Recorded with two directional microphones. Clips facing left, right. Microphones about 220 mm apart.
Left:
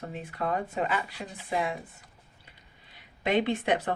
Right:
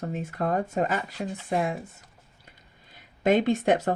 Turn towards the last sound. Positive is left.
turn(degrees=-45)  # may be behind; listen again after turning